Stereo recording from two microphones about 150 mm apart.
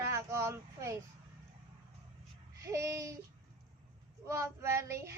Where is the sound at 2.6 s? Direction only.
20° right (ahead or behind).